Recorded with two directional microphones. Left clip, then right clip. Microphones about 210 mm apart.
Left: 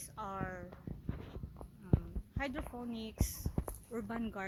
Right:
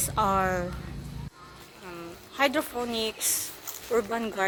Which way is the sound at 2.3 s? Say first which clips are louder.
Right 16 dB; 10° right (ahead or behind).